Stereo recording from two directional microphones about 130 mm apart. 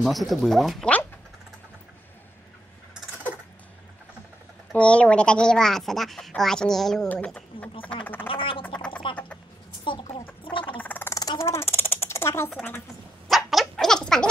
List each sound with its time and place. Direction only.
0.0 s speech: centre (ahead or behind)
4.7 s speech: 10° left (ahead or behind)
8.3 s speech: 45° left (ahead or behind)
9.0 s music: 40° left (ahead or behind)
9.8 s chicken: 40° left (ahead or behind)
10.4 s gargling: 40° left (ahead or behind)
10.8 s a sound: 15° left (ahead or behind)
11.1 s a sound: 25° left (ahead or behind)
13.3 s laughter: centre (ahead or behind)